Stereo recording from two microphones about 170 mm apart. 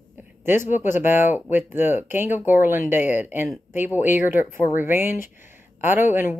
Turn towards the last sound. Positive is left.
turn(degrees=-10)  # may be behind; listen again after turning